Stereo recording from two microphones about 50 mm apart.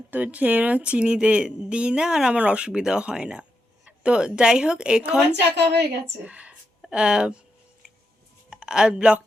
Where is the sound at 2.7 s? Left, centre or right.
Centre.